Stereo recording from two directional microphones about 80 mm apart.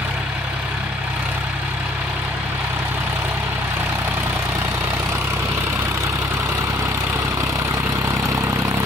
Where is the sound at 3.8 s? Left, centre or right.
Right.